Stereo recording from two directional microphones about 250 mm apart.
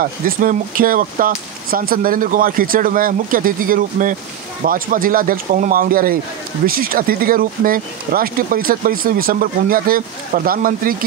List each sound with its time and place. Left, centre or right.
0.0 s speech: right